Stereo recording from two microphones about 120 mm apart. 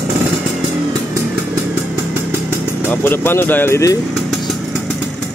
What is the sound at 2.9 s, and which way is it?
Speech, 20° left (ahead or behind).